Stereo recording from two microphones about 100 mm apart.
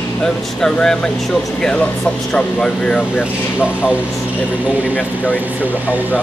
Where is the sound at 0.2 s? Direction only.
10° left (ahead or behind).